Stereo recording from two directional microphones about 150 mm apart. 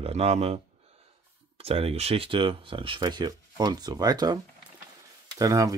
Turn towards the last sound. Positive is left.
turn(degrees=-25)  # may be behind; listen again after turning